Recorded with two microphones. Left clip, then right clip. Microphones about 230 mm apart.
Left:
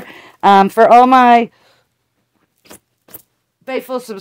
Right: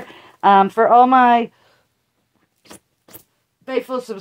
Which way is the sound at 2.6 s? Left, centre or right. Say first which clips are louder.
Left 2 dB; left.